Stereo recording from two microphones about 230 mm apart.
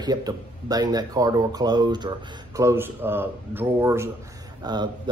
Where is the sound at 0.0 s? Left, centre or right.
Centre.